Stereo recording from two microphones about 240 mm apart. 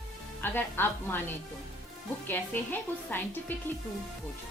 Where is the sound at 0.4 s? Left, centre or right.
Centre.